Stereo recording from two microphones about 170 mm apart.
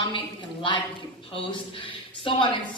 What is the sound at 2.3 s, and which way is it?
Speech, 30° left (ahead or behind).